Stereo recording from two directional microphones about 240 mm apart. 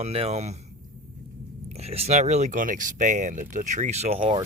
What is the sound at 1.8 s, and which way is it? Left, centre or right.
Speech, right.